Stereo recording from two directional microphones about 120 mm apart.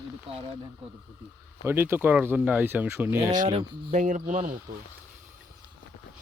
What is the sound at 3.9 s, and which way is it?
Speech, 90° right.